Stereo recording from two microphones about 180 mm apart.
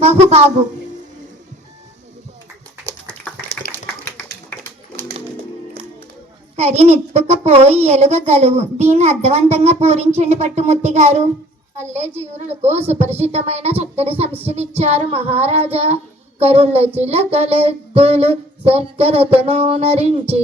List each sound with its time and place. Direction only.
0.0 s a woman's voice: 35° right (ahead or behind)
2.8 s dog: 5° left (ahead or behind)
3.7 s tap: 10° left (ahead or behind)
6.6 s a child's voice: 35° right (ahead or behind)